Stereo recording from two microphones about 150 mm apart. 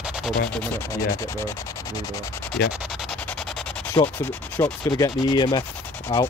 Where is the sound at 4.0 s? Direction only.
25° left (ahead or behind).